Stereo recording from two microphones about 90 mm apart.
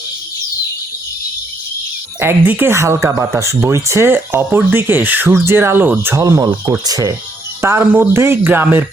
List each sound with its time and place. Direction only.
2.1 s speech: 25° right (ahead or behind)
2.7 s speech: 35° right (ahead or behind)
6.2 s speech: 35° right (ahead or behind)
7.6 s speech: 30° right (ahead or behind)